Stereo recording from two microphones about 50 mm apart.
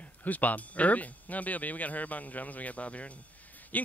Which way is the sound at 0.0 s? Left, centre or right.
Left.